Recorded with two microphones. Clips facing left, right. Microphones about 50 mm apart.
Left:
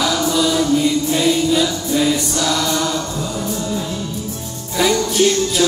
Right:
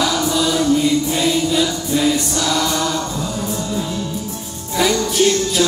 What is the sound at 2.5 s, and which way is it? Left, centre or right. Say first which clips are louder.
Chant: even; centre.